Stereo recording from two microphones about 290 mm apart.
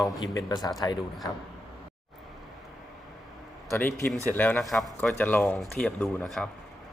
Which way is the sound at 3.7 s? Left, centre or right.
Centre.